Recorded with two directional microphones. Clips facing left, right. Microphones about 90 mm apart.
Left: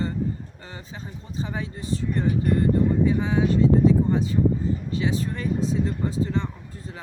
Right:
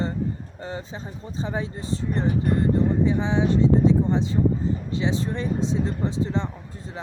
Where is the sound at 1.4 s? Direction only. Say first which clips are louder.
Right 2 dB; 30° right (ahead or behind).